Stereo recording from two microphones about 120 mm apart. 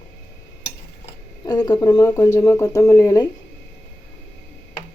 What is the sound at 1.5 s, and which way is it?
Speech, 40° left (ahead or behind).